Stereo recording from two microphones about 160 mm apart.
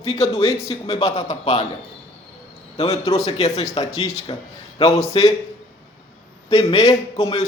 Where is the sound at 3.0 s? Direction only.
20° left (ahead or behind).